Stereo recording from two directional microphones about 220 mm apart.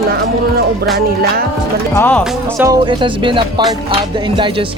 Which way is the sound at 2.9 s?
20° right (ahead or behind).